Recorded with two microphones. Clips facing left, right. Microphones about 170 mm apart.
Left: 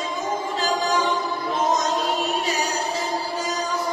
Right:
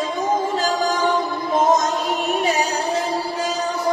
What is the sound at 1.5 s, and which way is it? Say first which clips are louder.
Music: right 5 dB; 50° right (ahead or behind).